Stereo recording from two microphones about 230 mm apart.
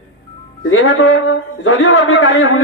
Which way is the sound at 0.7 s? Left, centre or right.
Left.